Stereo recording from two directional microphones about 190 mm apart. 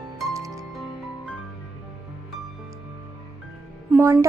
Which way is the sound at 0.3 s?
15° right (ahead or behind).